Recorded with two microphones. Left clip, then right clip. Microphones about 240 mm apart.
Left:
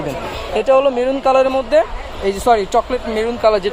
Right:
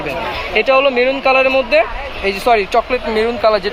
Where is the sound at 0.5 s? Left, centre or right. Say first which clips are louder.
Right 1 dB; left.